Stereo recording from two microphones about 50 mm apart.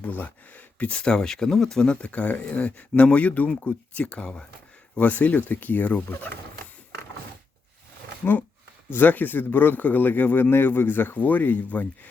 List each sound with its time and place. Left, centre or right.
0.0 s speech: left; by 1.9 s centre
1.9 s speech: left
4.0 s speech: centre
4.9 s speech: left
8.9 s speech: left